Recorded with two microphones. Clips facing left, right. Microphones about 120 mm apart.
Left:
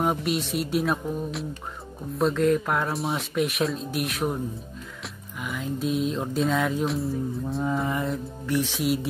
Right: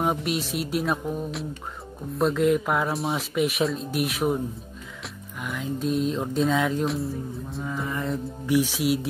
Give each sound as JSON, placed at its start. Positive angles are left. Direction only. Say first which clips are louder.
{"t": 0.0, "sound": "speech", "louder": "even", "side_deg": 0}
{"t": 7.6, "sound": "mantra", "louder": "left 5 dB", "side_deg": 25}
{"t": 8.5, "sound": "speech", "louder": "right 2 dB", "side_deg": -5}